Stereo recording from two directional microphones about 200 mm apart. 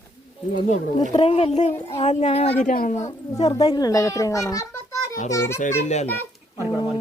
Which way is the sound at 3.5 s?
20° left (ahead or behind).